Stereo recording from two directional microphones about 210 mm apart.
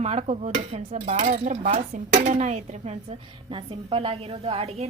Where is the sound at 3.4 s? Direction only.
25° right (ahead or behind).